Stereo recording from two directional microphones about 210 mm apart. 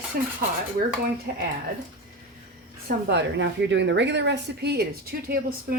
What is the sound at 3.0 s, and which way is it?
Speech, 55° right (ahead or behind).